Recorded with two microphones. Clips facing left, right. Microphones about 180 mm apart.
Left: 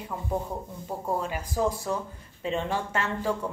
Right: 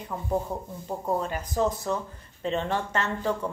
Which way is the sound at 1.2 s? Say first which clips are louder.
Right 1 dB; 10° left (ahead or behind).